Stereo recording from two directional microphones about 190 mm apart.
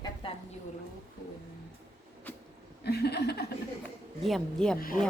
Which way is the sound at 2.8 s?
60° left (ahead or behind).